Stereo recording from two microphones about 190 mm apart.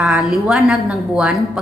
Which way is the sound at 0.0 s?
Centre (ahead or behind).